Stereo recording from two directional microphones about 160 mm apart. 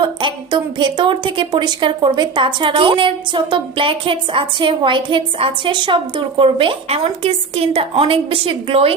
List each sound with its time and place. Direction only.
0.0 s a woman's voice: 30° right (ahead or behind)